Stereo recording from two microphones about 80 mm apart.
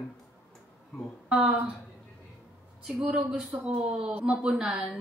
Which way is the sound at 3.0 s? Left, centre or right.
Centre.